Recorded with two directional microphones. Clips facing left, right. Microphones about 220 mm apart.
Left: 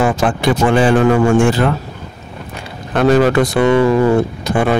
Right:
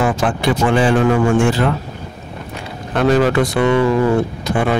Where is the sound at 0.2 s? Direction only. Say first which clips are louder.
Left 2 dB; 45° left (ahead or behind).